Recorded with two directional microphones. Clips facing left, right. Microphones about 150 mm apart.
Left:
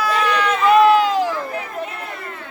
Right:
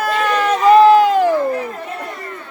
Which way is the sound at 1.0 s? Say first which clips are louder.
Right 6 dB; 55° right (ahead or behind).